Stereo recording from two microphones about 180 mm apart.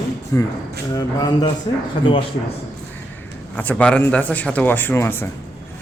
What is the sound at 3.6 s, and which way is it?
Speech, 10° left (ahead or behind).